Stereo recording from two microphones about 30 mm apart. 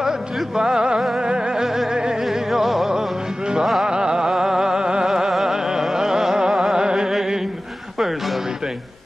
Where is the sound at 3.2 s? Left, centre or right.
Right.